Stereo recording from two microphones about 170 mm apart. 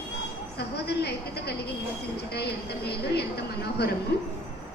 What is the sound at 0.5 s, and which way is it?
A woman's voice, 75° left (ahead or behind).